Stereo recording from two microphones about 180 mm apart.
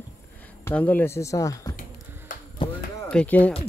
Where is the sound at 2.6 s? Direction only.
30° left (ahead or behind).